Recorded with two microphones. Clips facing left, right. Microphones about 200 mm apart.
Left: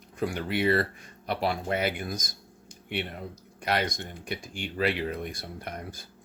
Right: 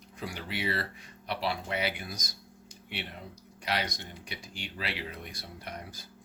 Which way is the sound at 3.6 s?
50° left (ahead or behind).